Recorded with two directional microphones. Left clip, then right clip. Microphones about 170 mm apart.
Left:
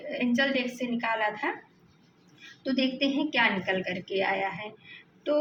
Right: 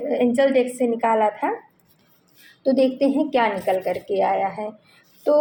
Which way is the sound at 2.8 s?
50° right (ahead or behind).